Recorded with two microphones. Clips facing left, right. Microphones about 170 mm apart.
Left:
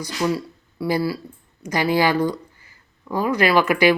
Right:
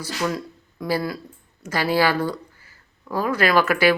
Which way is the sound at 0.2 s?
10° left (ahead or behind).